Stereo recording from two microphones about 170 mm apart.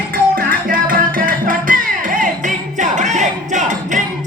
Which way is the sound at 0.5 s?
55° right (ahead or behind).